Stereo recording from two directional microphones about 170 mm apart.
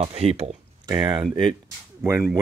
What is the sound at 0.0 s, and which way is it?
Speech, 35° right (ahead or behind).